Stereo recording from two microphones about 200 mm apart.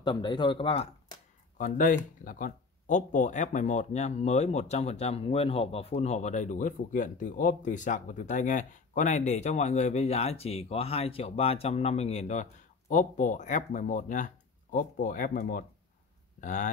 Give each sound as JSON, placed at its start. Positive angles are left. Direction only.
{"t": 0.0, "sound": "speech", "side_deg": 25}
{"t": 1.6, "sound": "speech", "side_deg": 40}